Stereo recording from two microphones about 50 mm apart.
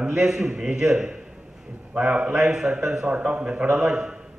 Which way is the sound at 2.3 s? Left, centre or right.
Centre.